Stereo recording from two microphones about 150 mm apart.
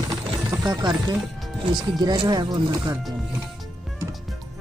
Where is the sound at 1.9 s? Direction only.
25° right (ahead or behind).